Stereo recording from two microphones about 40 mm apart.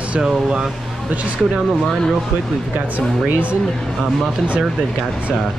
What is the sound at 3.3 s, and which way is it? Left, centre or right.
Speech, right.